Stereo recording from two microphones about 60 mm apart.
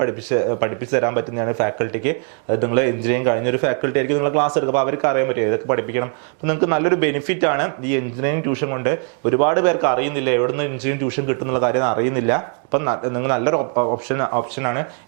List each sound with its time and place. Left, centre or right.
0.0 s speech: right